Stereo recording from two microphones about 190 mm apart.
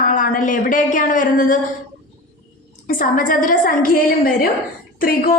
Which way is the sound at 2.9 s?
45° left (ahead or behind).